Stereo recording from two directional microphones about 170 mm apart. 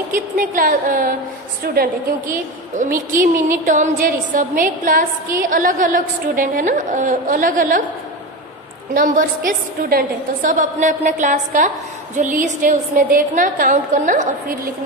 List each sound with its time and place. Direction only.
0.1 s a woman's voice: 55° right (ahead or behind)
8.9 s a woman's voice: 55° right (ahead or behind)